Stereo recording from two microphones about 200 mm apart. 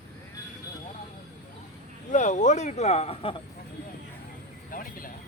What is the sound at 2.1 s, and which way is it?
Speech, 35° left (ahead or behind).